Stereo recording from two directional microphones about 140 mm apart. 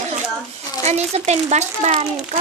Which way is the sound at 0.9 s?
50° right (ahead or behind).